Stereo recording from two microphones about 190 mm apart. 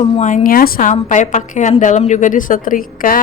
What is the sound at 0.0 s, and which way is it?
Speech, 35° left (ahead or behind).